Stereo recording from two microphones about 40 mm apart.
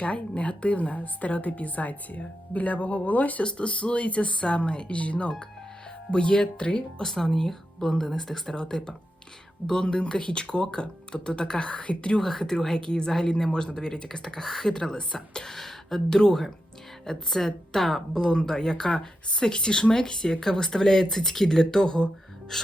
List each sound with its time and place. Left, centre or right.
0.0 s a woman's voice: left
3.4 s a woman's voice: left
7.0 s speech: centre
12.2 s speech: centre
15.4 s speech: centre
18.1 s speech: centre
22.5 s speech: centre